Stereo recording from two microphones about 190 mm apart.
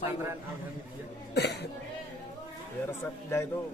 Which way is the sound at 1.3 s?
60° left (ahead or behind).